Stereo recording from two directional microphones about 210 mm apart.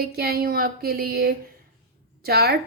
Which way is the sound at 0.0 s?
45° right (ahead or behind).